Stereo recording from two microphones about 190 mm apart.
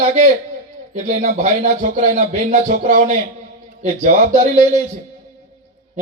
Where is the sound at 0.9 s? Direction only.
40° right (ahead or behind).